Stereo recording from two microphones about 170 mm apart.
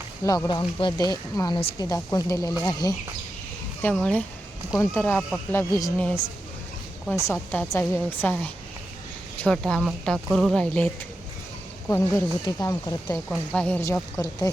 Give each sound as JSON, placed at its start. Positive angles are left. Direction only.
{"t": 0.4, "sound": "speech", "side_deg": 25}
{"t": 3.9, "sound": "a woman's voice", "side_deg": 5}
{"t": 7.3, "sound": "a woman's voice", "side_deg": 15}
{"t": 11.9, "sound": "speech", "side_deg": 15}
{"t": 13.5, "sound": "a woman's voice", "side_deg": 10}